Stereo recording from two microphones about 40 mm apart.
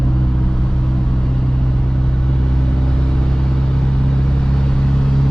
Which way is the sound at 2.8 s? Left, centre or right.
Centre.